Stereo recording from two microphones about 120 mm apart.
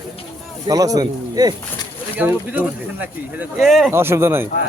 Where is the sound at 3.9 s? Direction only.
20° right (ahead or behind).